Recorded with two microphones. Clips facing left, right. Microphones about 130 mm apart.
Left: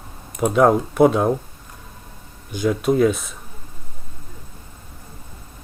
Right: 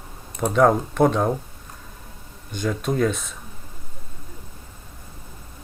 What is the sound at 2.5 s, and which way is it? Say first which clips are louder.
Speech: left 6 dB; 5° left (ahead or behind).